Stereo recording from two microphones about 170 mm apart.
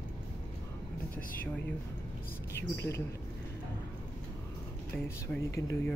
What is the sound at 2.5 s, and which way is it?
Speech, 15° left (ahead or behind).